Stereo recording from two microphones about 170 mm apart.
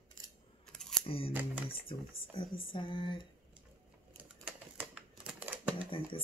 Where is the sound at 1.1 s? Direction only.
35° left (ahead or behind).